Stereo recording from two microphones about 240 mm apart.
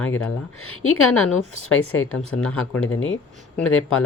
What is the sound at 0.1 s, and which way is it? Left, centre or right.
A man's voice, left.